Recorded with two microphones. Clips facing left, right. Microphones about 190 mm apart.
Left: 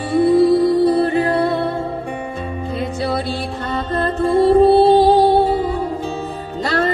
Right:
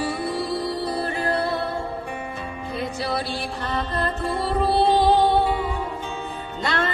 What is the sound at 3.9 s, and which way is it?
Music, 50° left (ahead or behind).